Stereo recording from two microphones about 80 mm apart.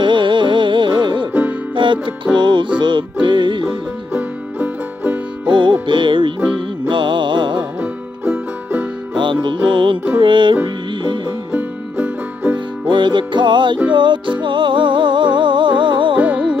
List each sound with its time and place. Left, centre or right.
0.0 s music: right
4.1 s music: right
5.5 s music: right
7.8 s music: right
9.1 s music: right
11.5 s music: right
12.8 s music: right
16.2 s music: centre